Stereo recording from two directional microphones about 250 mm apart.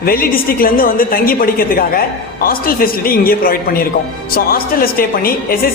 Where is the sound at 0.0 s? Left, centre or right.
Left.